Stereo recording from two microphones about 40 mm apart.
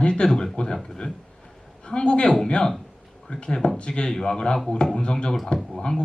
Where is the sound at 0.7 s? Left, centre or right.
Centre.